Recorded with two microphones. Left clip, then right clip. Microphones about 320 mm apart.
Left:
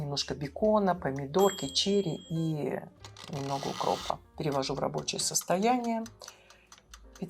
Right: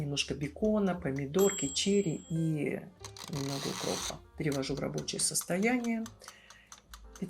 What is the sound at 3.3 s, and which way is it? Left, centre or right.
Speech, left.